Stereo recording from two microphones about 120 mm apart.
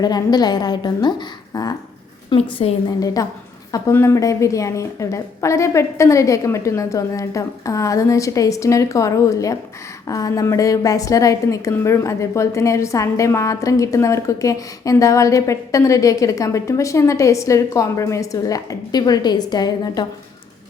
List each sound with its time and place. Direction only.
0.0 s a woman's voice: 35° left (ahead or behind)
2.3 s a woman's voice: 55° left (ahead or behind)
3.2 s a woman's voice: 30° left (ahead or behind)